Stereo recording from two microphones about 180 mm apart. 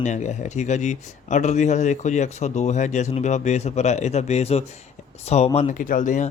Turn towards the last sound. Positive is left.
turn(degrees=45)  # may be behind; listen again after turning